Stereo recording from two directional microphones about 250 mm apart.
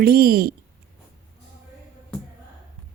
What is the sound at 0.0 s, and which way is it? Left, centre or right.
Speech, right.